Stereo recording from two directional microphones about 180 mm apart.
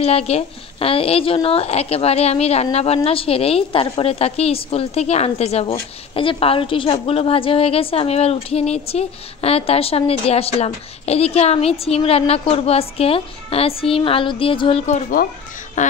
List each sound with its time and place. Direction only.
0.0 s a woman's voice: 35° left (ahead or behind)